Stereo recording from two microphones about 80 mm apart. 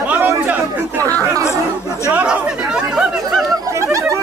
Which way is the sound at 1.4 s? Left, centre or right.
Left.